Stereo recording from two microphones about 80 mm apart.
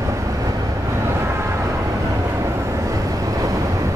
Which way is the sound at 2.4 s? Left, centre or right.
Right.